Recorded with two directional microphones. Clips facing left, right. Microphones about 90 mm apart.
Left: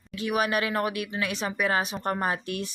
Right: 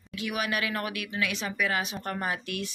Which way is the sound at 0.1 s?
35° left (ahead or behind).